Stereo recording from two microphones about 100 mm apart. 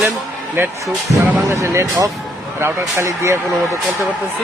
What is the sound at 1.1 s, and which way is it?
Speech, 30° right (ahead or behind).